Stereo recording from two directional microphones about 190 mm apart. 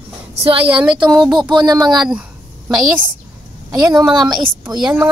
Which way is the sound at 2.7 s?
5° right (ahead or behind).